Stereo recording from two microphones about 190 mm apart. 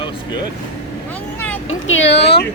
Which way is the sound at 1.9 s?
80° left.